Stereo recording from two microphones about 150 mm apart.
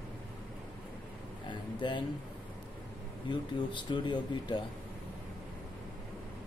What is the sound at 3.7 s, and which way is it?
Speech, 30° left (ahead or behind).